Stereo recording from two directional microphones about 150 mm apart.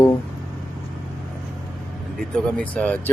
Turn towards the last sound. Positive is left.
turn(degrees=5)  # may be behind; listen again after turning